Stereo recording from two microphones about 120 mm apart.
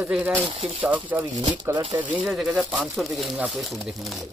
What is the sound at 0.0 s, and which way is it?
Speech, 10° right (ahead or behind).